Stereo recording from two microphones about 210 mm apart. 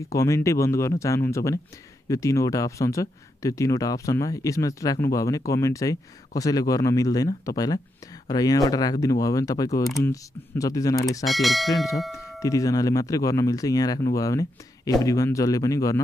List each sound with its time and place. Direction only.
0.1 s speech: 15° left (ahead or behind)
11.2 s speech: centre (ahead or behind)
12.4 s speech: 15° left (ahead or behind)